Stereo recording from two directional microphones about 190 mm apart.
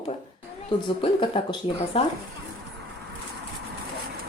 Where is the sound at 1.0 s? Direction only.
30° left (ahead or behind).